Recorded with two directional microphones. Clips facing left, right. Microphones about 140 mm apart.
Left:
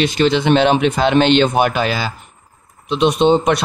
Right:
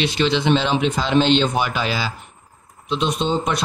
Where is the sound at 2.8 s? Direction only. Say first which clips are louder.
Left 8 dB; 65° left (ahead or behind).